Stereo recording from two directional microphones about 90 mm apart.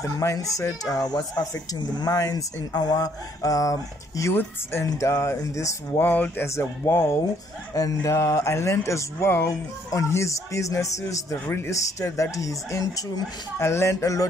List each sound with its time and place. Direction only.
0.0 s speech: 35° left (ahead or behind)
4.2 s a sound: 30° left (ahead or behind)
4.8 s speech: 35° left (ahead or behind)
5.9 s a sound: 20° left (ahead or behind)
7.7 s speech: 40° left (ahead or behind)
13.6 s speech: 30° left (ahead or behind)